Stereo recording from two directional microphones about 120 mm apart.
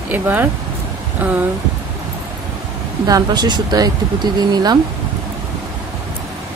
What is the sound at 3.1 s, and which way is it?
Speech, 35° right (ahead or behind).